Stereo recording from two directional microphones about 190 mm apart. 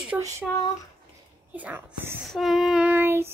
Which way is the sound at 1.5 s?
10° right (ahead or behind).